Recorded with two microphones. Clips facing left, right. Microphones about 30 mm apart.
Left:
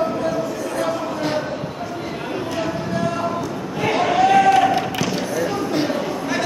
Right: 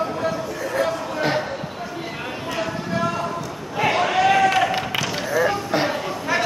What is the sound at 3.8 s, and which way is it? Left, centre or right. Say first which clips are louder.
Basketball bounce: left 1 dB; centre.